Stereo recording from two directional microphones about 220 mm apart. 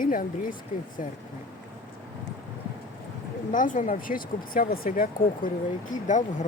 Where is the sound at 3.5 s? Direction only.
35° left (ahead or behind).